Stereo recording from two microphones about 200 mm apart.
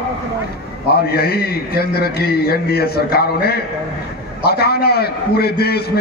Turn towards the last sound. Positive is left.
turn(degrees=50)  # may be behind; listen again after turning